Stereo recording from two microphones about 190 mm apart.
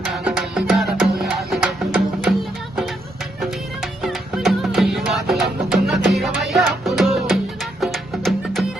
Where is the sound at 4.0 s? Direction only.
Centre (ahead or behind).